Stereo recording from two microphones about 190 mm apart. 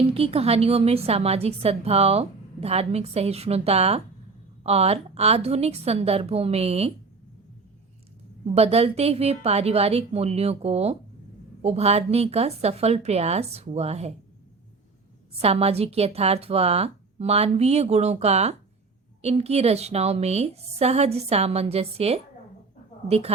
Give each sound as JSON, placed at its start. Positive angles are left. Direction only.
{"t": 0.1, "sound": "a woman's voice", "side_deg": -30}
{"t": 8.5, "sound": "a woman's voice", "side_deg": -30}
{"t": 15.4, "sound": "a woman's voice", "side_deg": -30}